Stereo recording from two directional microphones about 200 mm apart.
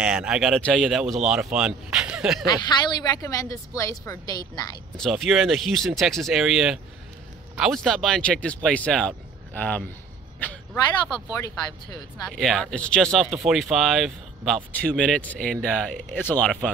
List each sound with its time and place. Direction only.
0.0 s speech: 5° right (ahead or behind)
2.4 s a woman's voice: 20° left (ahead or behind)
4.9 s speech: centre (ahead or behind)
10.4 s a sound: 5° left (ahead or behind)
12.3 s speech: centre (ahead or behind)